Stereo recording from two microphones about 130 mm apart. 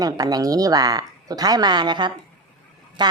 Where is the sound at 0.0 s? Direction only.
30° right (ahead or behind).